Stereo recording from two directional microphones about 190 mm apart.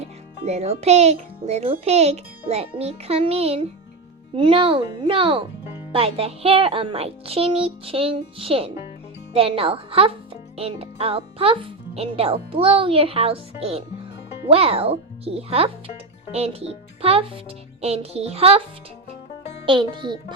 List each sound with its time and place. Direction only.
0.0 s a child's voice: 35° right (ahead or behind)
19.6 s a child's voice: 25° right (ahead or behind)